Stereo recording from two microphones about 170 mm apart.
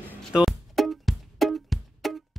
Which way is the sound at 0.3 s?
5° right (ahead or behind).